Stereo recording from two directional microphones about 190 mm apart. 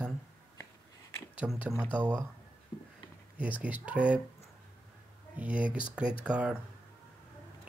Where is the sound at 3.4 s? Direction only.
5° right (ahead or behind).